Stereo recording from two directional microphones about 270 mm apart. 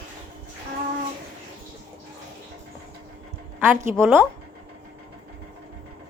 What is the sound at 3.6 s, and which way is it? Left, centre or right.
Speech, centre.